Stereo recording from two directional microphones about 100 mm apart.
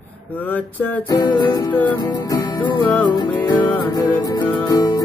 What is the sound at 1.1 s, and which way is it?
Music, 50° left (ahead or behind).